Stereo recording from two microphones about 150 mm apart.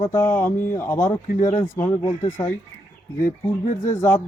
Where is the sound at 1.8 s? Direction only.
20° left (ahead or behind).